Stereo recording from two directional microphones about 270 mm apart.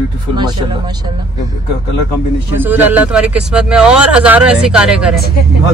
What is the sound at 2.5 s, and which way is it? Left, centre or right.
Speech, centre.